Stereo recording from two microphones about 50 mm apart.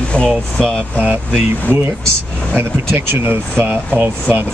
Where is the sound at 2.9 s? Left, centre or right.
Right.